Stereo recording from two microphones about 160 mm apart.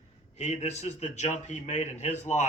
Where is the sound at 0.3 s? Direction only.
45° left (ahead or behind).